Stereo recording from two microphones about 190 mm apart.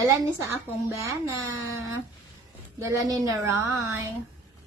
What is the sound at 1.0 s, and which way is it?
A woman's voice, 15° right (ahead or behind).